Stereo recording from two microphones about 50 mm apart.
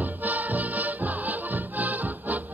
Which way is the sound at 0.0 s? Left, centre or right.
Right.